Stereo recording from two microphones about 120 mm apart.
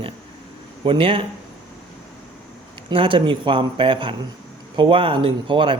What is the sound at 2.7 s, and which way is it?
A man's voice, 45° right (ahead or behind).